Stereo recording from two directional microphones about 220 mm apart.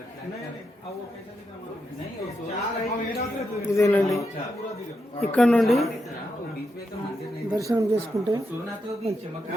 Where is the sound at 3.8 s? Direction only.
10° left (ahead or behind).